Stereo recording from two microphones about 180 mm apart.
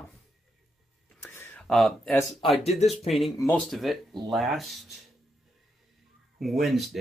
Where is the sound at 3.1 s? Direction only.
Centre (ahead or behind).